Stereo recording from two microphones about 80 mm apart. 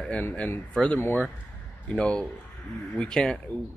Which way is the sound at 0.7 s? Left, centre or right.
Centre.